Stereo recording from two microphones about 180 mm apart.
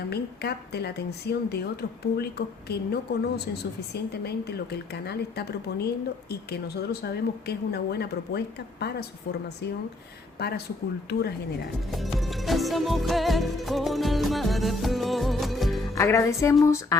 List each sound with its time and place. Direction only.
0.1 s a woman's voice: 65° left (ahead or behind)
7.0 s a woman's voice: 65° left (ahead or behind)
10.4 s a woman's voice: 60° left (ahead or behind)
11.9 s music: centre (ahead or behind)
16.0 s speech: 15° left (ahead or behind)